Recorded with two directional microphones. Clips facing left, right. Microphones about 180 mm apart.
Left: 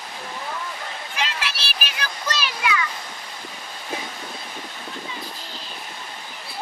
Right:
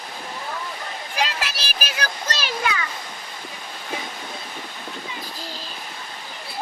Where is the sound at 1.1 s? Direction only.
40° right (ahead or behind).